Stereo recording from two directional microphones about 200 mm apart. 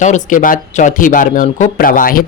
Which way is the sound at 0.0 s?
40° left (ahead or behind).